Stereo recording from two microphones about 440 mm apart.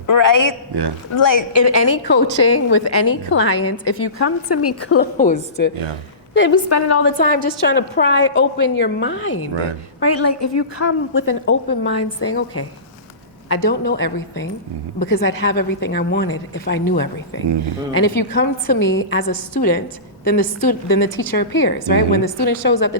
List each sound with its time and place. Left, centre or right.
0.1 s a woman's voice: left
0.7 s speech: right
1.2 s a woman's voice: left
2.0 s a woman's voice: left
4.9 s a woman's voice: centre
6.7 s a woman's voice: left
7.0 s a woman's voice: left